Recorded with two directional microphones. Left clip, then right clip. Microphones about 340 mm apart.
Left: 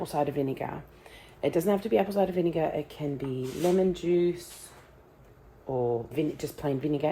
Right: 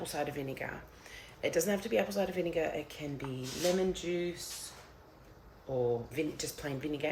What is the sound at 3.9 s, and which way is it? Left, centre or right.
Speech, centre.